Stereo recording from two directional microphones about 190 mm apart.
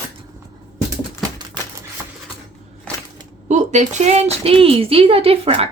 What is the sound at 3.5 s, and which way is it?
A woman's voice, 40° right (ahead or behind).